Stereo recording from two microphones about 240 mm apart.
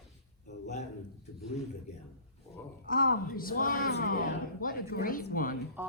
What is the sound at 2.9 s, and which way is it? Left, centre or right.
Speech, left.